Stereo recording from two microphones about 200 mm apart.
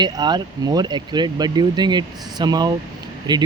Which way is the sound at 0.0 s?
20° right (ahead or behind).